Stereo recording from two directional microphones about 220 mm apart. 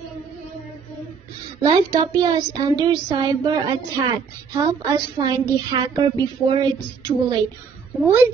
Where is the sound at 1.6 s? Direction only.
15° right (ahead or behind).